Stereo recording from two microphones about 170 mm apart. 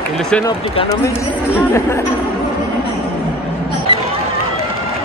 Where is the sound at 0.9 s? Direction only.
15° left (ahead or behind).